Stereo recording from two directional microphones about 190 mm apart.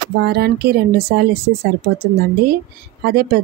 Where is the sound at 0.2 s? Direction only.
60° right (ahead or behind).